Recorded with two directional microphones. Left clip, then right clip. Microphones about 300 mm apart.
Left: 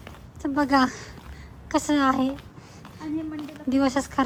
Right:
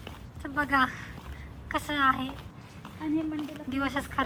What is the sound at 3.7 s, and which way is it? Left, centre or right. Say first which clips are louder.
Speech: left 6 dB; left.